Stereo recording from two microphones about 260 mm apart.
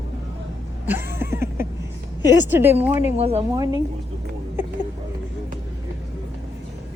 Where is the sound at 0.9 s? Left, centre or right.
Centre.